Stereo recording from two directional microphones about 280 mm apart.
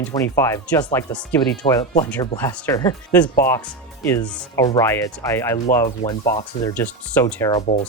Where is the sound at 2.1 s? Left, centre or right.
Centre.